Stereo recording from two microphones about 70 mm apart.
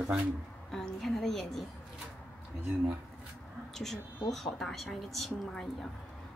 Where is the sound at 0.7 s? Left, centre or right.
Centre.